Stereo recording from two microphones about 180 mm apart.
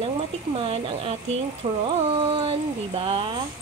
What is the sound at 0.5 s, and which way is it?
Speech, 30° right (ahead or behind).